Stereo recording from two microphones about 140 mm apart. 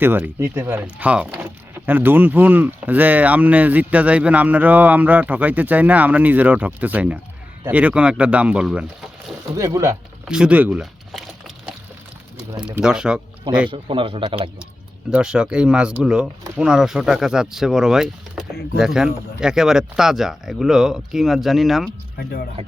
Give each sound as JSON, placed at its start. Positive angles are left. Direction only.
{"t": 0.0, "sound": "speech", "side_deg": -15}
{"t": 9.6, "sound": "speech", "side_deg": -20}
{"t": 10.2, "sound": "a sound", "side_deg": -5}
{"t": 12.6, "sound": "speech", "side_deg": -5}
{"t": 13.7, "sound": "a man's voice", "side_deg": -40}
{"t": 15.1, "sound": "speech", "side_deg": -5}
{"t": 22.2, "sound": "speech", "side_deg": 90}